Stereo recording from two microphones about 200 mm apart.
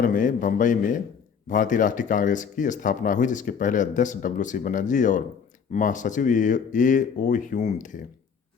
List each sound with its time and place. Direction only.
0.0 s speech: 40° left (ahead or behind)